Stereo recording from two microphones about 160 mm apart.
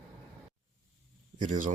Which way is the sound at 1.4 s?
55° right (ahead or behind).